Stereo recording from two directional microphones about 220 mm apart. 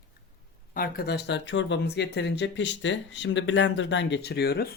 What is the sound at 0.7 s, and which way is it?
Speech, 40° left (ahead or behind).